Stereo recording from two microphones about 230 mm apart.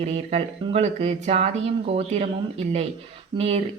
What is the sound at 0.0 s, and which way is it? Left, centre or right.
A woman's voice, right.